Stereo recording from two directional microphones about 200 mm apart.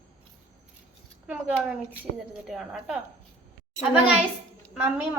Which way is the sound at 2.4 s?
Centre (ahead or behind).